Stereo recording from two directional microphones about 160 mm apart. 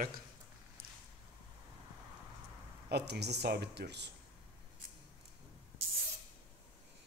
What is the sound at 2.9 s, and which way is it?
Speech, 90° right.